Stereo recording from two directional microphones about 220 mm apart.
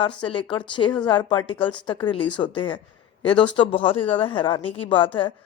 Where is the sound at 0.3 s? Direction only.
20° left (ahead or behind).